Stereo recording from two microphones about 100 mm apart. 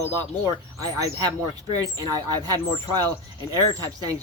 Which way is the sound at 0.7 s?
35° right (ahead or behind).